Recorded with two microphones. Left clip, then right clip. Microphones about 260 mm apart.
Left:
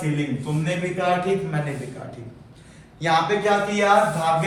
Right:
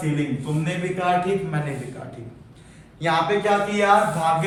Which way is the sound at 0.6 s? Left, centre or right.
Centre.